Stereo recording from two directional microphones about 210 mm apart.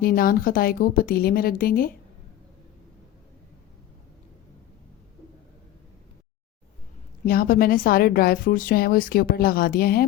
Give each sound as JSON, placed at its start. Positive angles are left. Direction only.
{"t": 0.0, "sound": "a woman's voice", "side_deg": 45}
{"t": 7.3, "sound": "a woman's voice", "side_deg": 45}